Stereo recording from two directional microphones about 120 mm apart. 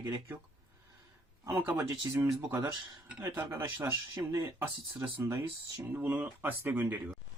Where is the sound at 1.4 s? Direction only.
25° right (ahead or behind).